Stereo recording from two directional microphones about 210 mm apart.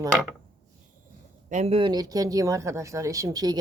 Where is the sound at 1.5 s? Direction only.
30° right (ahead or behind).